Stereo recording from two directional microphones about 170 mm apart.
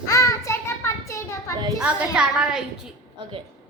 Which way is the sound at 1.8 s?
5° right (ahead or behind).